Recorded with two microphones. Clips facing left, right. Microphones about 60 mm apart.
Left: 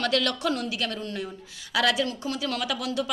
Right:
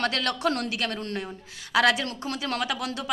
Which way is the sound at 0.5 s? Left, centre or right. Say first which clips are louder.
Right 1 dB; right.